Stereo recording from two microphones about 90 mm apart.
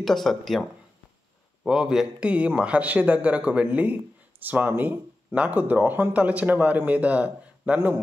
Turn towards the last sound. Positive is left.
turn(degrees=-20)  # may be behind; listen again after turning